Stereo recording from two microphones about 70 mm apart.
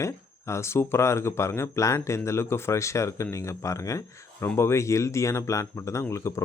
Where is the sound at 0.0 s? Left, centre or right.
Left.